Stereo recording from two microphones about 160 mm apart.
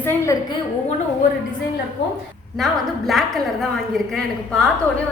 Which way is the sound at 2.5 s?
Centre (ahead or behind).